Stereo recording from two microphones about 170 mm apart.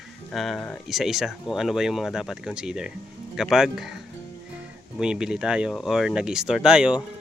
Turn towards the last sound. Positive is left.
turn(degrees=-5)  # may be behind; listen again after turning